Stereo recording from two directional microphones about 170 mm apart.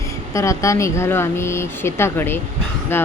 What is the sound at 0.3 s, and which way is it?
Speech, 15° left (ahead or behind).